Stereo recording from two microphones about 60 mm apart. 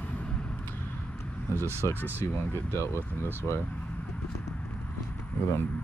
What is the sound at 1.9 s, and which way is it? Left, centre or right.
Speech, right.